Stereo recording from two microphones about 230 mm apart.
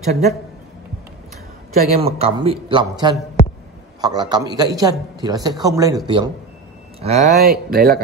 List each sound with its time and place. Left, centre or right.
0.0 s a man's voice: right
2.0 s a man's voice: right
7.0 s speech: right